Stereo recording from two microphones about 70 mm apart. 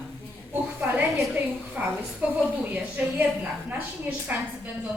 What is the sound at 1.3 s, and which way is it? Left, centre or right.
A woman's voice, right.